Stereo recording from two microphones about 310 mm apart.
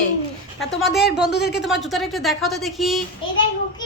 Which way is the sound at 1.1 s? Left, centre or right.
Left.